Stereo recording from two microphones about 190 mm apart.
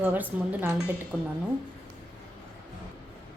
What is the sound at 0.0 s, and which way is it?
A woman's voice, 10° right (ahead or behind).